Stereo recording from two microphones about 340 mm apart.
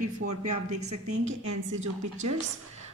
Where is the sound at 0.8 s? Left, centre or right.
Right.